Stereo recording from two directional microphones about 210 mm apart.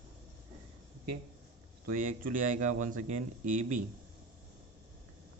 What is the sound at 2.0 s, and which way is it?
Speech, 40° right (ahead or behind).